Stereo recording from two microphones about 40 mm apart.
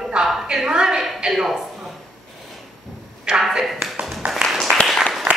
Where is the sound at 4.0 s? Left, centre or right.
Right.